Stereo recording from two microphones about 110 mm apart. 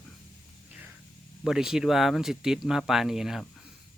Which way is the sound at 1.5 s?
5° right (ahead or behind).